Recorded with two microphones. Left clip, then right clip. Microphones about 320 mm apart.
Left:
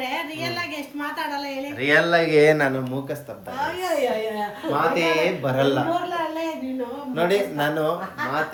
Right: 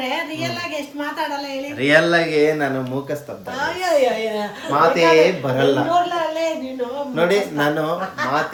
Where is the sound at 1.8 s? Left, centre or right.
Centre.